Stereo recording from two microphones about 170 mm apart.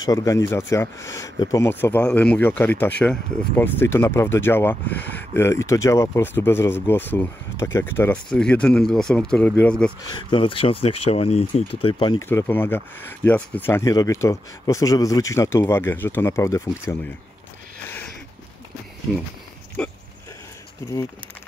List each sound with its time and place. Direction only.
0.0 s speech: 20° left (ahead or behind)
10.0 s speech: 25° left (ahead or behind)
12.3 s speech: 10° left (ahead or behind)
19.8 s speech: 5° left (ahead or behind)
20.8 s speech: 15° left (ahead or behind)